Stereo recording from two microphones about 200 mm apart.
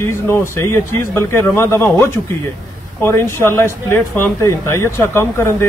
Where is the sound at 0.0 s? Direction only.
15° left (ahead or behind).